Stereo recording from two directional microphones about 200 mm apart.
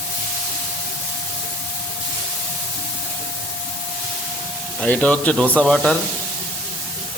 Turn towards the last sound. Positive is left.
turn(degrees=5)  # may be behind; listen again after turning